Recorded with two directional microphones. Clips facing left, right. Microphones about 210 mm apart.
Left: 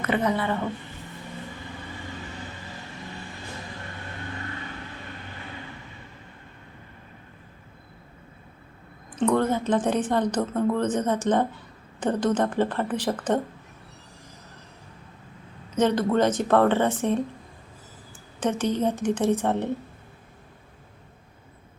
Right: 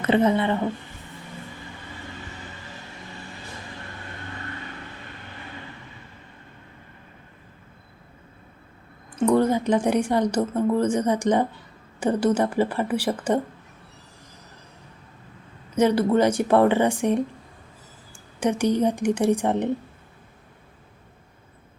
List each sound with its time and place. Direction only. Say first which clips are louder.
0.0 s a woman's voice: right 5 dB; 25° right (ahead or behind)
9.1 s a woman's voice: right 3 dB; 10° right (ahead or behind)
15.8 s a woman's voice: right 2 dB; 10° right (ahead or behind)
18.3 s a woman's voice: right 3 dB; 10° right (ahead or behind)